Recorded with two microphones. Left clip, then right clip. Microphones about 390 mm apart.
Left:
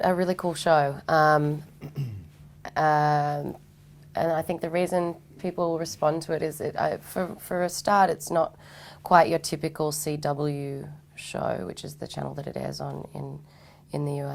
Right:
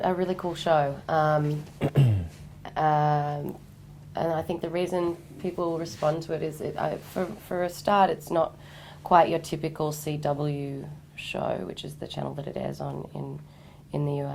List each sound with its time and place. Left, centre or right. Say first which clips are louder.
0.0 s a woman's voice: left 3 dB; left
1.8 s beatboxing: right 14 dB; right
2.6 s a sound: left 2 dB; left
4.1 s a woman's voice: left 2 dB; left